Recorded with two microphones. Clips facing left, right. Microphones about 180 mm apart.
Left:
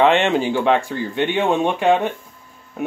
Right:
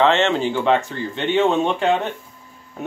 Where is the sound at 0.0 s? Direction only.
15° left (ahead or behind).